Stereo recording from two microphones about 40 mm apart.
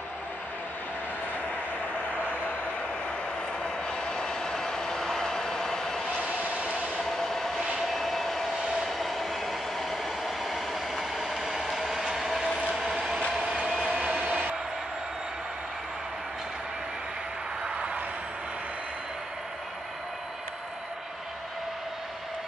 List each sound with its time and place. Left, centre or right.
3.6 s vehicle: centre
5.2 s a sound: centre
6.3 s train: right
7.1 s train: centre
7.8 s vehicle: centre
8.8 s train: centre
11.8 s ratchet: centre
13.7 s vehicle: centre
14.2 s a sound: right